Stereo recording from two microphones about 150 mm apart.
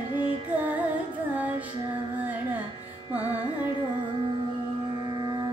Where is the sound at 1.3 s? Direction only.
10° right (ahead or behind).